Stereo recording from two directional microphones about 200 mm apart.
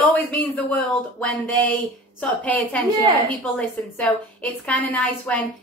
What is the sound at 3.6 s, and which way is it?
A woman's voice, 5° left (ahead or behind).